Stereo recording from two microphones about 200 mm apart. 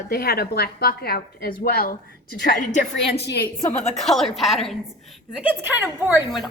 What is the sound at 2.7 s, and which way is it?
Speech, 60° left (ahead or behind).